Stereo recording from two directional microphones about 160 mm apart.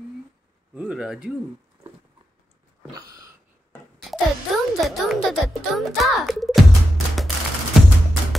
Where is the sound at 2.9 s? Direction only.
25° right (ahead or behind).